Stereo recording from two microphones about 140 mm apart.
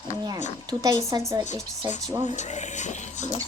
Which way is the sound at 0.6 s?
25° right (ahead or behind).